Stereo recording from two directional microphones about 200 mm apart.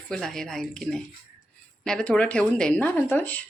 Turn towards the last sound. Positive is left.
turn(degrees=10)  # may be behind; listen again after turning